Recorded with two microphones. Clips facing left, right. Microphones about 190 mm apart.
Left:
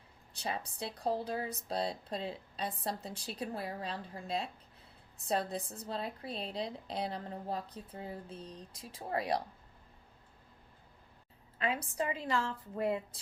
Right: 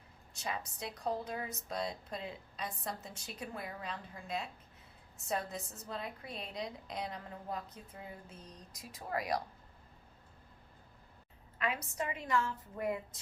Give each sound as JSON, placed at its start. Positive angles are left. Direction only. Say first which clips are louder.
{"t": 0.3, "sound": "a woman's voice", "louder": "left 2 dB", "side_deg": 30}
{"t": 11.5, "sound": "a woman's voice", "louder": "left 3 dB", "side_deg": 30}